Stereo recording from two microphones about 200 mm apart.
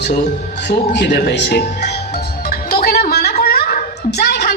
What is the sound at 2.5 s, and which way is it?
Music, 50° left (ahead or behind).